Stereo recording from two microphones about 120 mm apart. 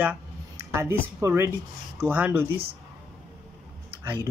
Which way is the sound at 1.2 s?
20° right (ahead or behind).